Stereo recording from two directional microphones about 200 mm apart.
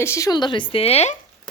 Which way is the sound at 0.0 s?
15° left (ahead or behind).